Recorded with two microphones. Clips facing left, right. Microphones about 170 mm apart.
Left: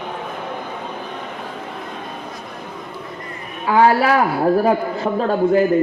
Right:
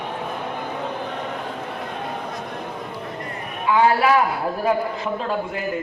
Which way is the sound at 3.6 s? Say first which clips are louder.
Left 3 dB; 40° left (ahead or behind).